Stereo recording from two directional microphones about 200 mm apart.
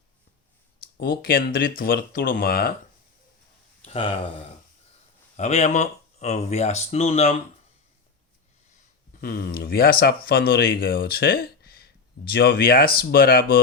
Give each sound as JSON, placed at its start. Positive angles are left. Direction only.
{"t": 0.9, "sound": "speech", "side_deg": 50}
{"t": 3.8, "sound": "speech", "side_deg": 25}
{"t": 5.4, "sound": "speech", "side_deg": 35}
{"t": 9.2, "sound": "speech", "side_deg": 50}